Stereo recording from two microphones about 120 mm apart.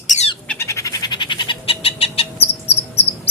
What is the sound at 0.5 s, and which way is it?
Bird, 25° left (ahead or behind).